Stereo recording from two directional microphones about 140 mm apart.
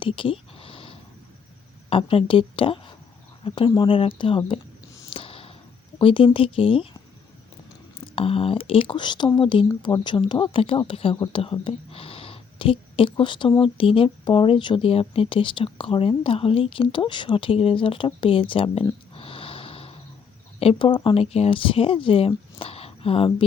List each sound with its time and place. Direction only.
0.0 s a sound: 40° left (ahead or behind)
1.9 s speech: 40° left (ahead or behind)
5.1 s a sound: 40° left (ahead or behind)
6.0 s speech: 40° left (ahead or behind)
7.9 s speech: 40° left (ahead or behind)
19.1 s snort: 40° left (ahead or behind)
20.6 s speech: 40° left (ahead or behind)